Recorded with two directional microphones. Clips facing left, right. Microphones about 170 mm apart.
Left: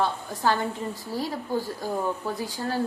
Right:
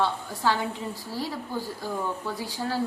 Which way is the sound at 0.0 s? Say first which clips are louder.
Left 1 dB; 50° left (ahead or behind).